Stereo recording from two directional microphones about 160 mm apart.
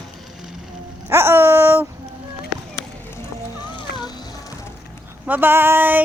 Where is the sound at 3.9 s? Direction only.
90° left.